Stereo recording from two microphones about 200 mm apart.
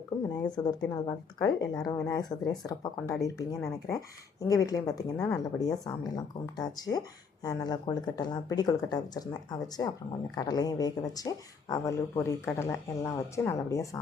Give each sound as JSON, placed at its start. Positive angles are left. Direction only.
{"t": 0.5, "sound": "speech", "side_deg": 20}